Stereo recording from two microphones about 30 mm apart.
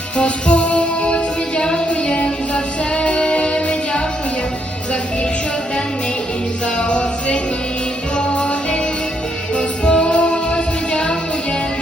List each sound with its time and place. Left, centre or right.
0.2 s music: left
6.7 s music: left
9.6 s music: left